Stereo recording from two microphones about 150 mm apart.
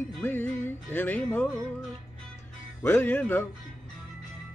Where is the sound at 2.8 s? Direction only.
15° left (ahead or behind).